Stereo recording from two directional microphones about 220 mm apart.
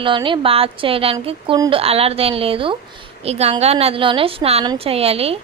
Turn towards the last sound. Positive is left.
turn(degrees=-25)  # may be behind; listen again after turning